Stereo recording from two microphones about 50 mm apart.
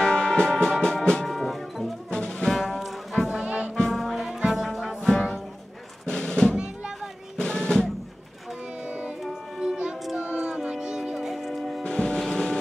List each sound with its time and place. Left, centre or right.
0.0 s music: centre
1.2 s music: centre
2.0 s music: centre
2.5 s music: centre
3.3 s music: right
3.7 s music: centre
6.0 s music: centre
6.5 s music: centre
7.3 s drum: centre
8.8 s music: right
9.3 s music: centre
10.1 s music: right; by 11.8 s centre
11.8 s music: centre
12.2 s vehicle: centre